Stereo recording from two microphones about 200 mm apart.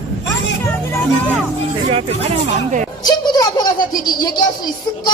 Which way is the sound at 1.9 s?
30° right (ahead or behind).